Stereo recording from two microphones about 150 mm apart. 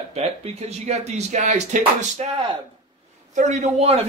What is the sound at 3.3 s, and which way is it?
Speech, 50° right (ahead or behind).